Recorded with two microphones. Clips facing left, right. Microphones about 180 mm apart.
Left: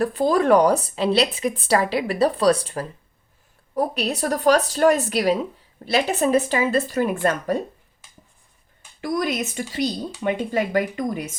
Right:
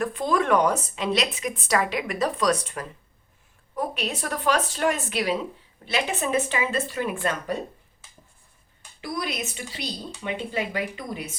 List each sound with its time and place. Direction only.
0.0 s a woman's voice: 35° left (ahead or behind)
9.0 s speech: 45° left (ahead or behind)